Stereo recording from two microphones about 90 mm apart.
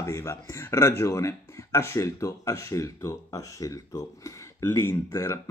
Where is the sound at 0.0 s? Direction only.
35° left (ahead or behind).